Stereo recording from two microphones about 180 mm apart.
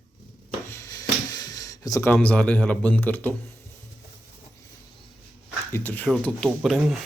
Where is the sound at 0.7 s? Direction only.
20° left (ahead or behind).